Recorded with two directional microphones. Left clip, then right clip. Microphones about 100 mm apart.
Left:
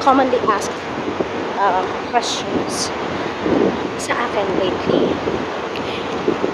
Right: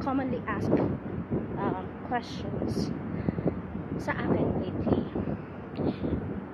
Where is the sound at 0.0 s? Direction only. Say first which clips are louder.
Left 17 dB; 20° left (ahead or behind).